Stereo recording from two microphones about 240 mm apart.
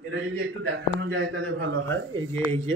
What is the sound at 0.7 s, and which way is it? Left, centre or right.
A man's voice, right.